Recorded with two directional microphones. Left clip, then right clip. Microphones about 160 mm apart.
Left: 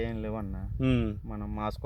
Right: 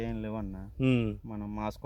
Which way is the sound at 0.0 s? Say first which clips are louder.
Left 2 dB; 20° left (ahead or behind).